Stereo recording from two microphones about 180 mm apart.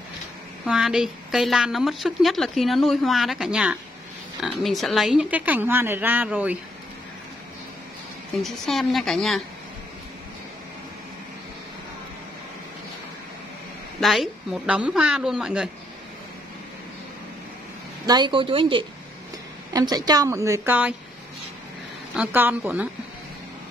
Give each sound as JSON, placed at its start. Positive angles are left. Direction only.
{"t": 0.7, "sound": "a woman's voice", "side_deg": -5}
{"t": 8.4, "sound": "a woman's voice", "side_deg": 0}
{"t": 13.9, "sound": "a woman's voice", "side_deg": 0}
{"t": 18.0, "sound": "a woman's voice", "side_deg": -25}
{"t": 22.1, "sound": "speech", "side_deg": -10}